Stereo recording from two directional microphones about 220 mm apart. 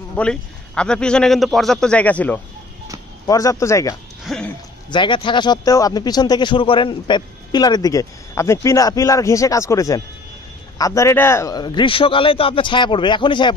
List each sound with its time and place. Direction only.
0.1 s a man's voice: 5° left (ahead or behind)
4.2 s speech: centre (ahead or behind)
4.8 s a man's voice: 20° left (ahead or behind)